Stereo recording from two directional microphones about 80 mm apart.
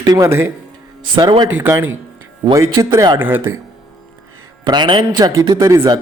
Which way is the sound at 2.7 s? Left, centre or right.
Right.